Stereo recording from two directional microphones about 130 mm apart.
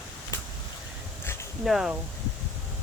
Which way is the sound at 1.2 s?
20° left (ahead or behind).